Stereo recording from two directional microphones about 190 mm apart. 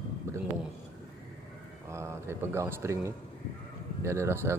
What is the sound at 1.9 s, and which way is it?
Speech, 15° right (ahead or behind).